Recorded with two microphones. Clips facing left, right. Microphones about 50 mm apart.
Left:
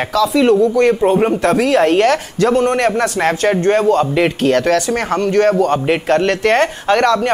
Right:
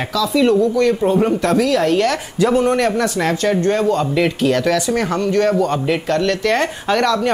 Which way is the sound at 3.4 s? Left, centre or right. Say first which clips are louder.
Left 3 dB; left.